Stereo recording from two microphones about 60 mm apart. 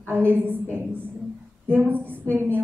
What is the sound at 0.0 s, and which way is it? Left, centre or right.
Speech, right.